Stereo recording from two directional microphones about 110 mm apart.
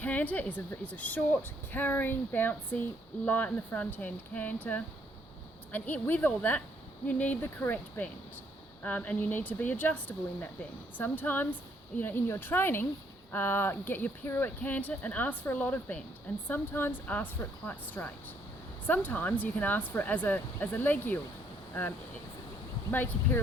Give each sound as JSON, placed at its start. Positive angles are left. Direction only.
{"t": 0.0, "sound": "speech", "side_deg": 15}
{"t": 22.9, "sound": "speech", "side_deg": 15}